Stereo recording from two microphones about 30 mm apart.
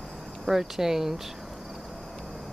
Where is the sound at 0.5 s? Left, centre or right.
Centre.